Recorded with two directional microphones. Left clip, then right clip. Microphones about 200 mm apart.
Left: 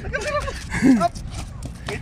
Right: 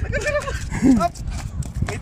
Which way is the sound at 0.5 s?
10° right (ahead or behind).